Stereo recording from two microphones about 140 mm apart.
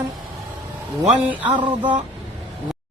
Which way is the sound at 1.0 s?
10° right (ahead or behind).